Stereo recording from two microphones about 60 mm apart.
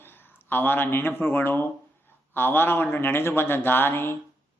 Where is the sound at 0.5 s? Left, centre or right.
Left.